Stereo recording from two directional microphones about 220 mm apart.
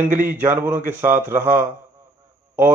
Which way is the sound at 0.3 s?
10° right (ahead or behind).